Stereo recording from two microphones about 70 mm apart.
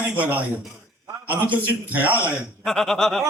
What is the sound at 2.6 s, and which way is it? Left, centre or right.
Speech, centre.